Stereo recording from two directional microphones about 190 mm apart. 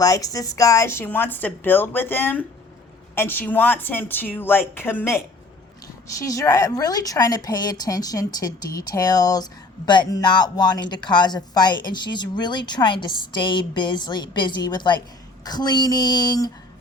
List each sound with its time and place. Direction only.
0.0 s a woman's voice: 20° left (ahead or behind)